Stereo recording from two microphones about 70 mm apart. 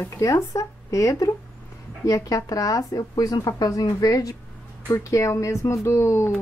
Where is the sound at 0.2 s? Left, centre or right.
Left.